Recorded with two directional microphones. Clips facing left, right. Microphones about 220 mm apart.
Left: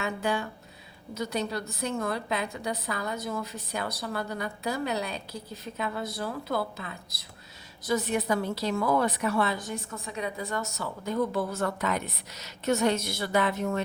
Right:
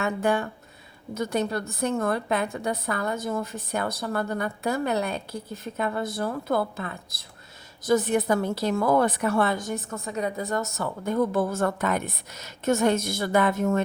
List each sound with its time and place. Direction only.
0.0 s a woman's voice: 50° right (ahead or behind)